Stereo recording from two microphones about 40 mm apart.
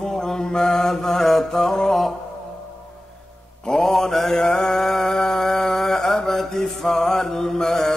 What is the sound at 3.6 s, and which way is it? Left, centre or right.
Mantra, centre.